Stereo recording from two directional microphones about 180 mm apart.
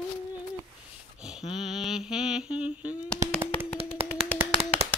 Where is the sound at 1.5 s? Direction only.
Centre (ahead or behind).